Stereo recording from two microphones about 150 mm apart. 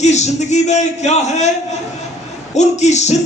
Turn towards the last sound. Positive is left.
turn(degrees=50)  # may be behind; listen again after turning